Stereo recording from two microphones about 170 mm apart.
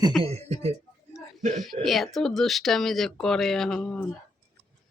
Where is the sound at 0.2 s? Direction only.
40° right (ahead or behind).